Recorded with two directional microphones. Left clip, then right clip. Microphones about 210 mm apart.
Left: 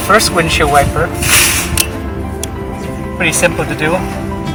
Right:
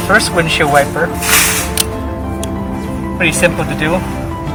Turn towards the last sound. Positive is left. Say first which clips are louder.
# even
turn(degrees=0)  # may be behind; listen again after turning